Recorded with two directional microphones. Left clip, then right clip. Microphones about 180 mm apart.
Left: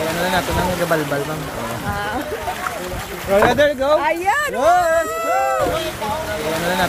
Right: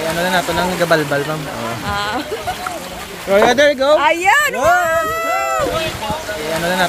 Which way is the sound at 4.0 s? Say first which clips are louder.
Right 5 dB; 25° right (ahead or behind).